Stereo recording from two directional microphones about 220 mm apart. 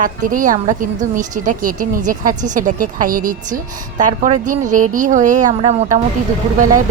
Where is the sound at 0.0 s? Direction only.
35° right (ahead or behind).